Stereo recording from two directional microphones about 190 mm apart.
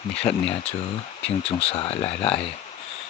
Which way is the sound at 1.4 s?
30° left (ahead or behind).